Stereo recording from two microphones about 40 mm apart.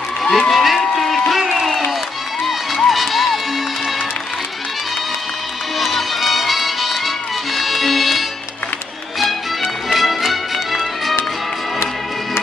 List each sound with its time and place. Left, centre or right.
0.2 s a man's voice: centre
0.7 s a sound: centre
2.4 s music: centre
5.8 s music: centre